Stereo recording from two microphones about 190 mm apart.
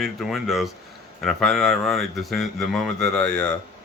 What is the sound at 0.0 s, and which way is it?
Speech, centre (ahead or behind).